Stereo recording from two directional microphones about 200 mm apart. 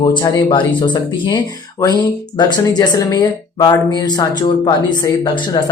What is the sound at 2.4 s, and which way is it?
Speech, 20° left (ahead or behind).